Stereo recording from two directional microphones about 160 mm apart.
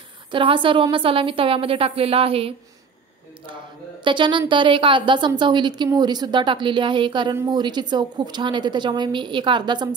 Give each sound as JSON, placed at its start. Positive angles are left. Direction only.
{"t": 0.3, "sound": "a woman's voice", "side_deg": -30}
{"t": 4.0, "sound": "a woman's voice", "side_deg": -30}